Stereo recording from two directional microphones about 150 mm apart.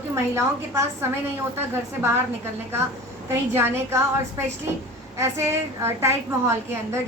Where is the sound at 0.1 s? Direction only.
20° right (ahead or behind).